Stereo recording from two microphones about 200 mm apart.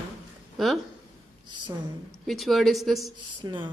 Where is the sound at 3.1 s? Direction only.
25° right (ahead or behind).